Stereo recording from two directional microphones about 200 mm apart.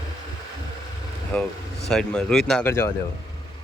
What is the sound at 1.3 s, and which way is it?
Speech, 5° left (ahead or behind).